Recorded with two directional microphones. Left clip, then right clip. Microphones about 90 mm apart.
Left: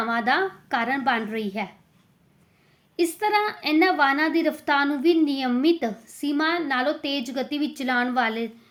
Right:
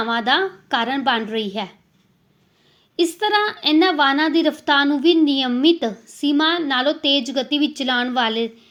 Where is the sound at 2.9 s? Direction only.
35° right (ahead or behind).